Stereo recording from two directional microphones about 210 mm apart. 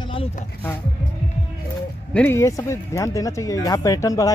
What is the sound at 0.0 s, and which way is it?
Music, 25° left (ahead or behind).